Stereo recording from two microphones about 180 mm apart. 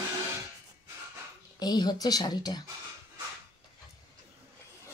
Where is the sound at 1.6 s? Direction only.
20° left (ahead or behind).